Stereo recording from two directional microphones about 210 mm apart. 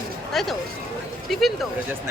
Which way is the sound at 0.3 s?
Centre (ahead or behind).